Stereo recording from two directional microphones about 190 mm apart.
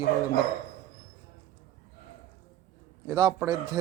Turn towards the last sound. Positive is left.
turn(degrees=-20)  # may be behind; listen again after turning